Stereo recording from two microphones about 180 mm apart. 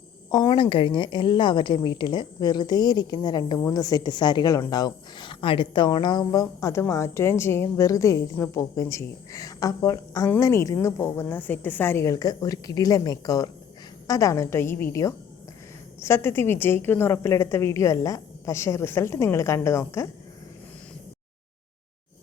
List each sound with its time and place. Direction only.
0.3 s a woman's voice: 20° left (ahead or behind)